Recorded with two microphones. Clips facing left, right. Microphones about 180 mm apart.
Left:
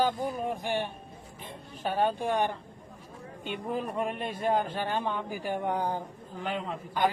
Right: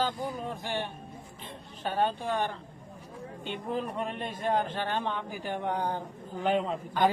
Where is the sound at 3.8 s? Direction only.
10° left (ahead or behind).